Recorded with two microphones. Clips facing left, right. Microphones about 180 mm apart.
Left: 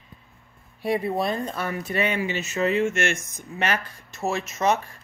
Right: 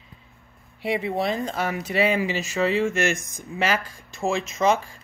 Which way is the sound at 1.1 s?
85° right.